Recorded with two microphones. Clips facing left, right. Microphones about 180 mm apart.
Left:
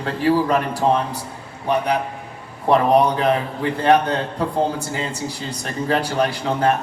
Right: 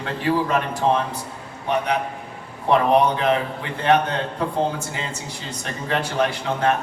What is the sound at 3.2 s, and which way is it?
Speech, 35° left (ahead or behind).